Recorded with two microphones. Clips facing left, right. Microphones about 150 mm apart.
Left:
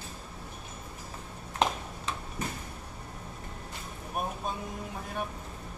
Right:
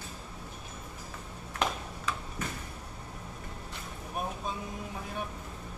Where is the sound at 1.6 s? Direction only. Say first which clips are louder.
Left 3 dB; 25° left (ahead or behind).